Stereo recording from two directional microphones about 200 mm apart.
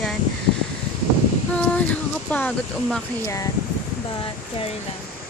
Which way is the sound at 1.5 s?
5° left (ahead or behind).